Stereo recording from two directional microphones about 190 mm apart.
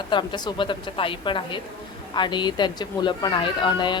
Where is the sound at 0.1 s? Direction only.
25° left (ahead or behind).